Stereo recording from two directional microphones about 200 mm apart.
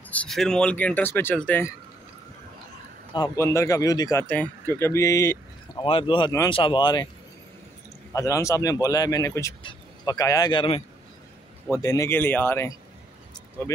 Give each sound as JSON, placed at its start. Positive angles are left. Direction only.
{"t": 0.1, "sound": "speech", "side_deg": 5}
{"t": 3.2, "sound": "speech", "side_deg": 15}
{"t": 5.9, "sound": "speech", "side_deg": 25}
{"t": 8.1, "sound": "speech", "side_deg": 15}
{"t": 11.7, "sound": "speech", "side_deg": 15}